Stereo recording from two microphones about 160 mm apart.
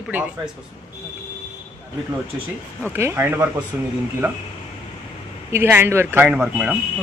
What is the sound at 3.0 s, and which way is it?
Speech, 15° right (ahead or behind).